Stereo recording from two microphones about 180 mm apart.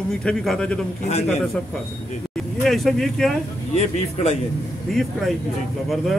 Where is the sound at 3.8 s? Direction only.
40° left (ahead or behind).